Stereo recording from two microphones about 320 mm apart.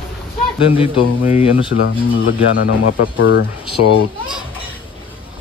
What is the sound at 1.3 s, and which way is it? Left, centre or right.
Speech, centre.